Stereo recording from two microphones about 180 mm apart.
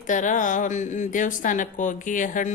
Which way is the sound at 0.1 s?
45° left (ahead or behind).